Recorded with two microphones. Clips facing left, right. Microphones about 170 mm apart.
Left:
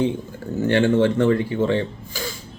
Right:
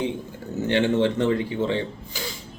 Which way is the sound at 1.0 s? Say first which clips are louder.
Left 4 dB; 15° right (ahead or behind).